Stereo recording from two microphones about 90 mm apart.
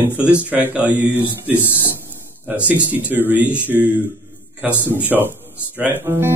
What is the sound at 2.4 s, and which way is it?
Speech, 15° right (ahead or behind).